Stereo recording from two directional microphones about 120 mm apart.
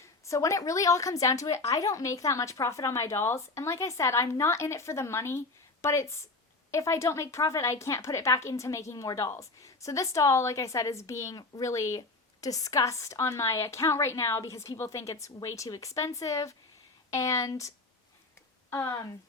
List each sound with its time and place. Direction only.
0.3 s a woman's voice: 25° left (ahead or behind)